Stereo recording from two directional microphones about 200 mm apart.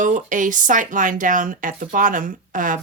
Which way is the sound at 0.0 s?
40° right (ahead or behind).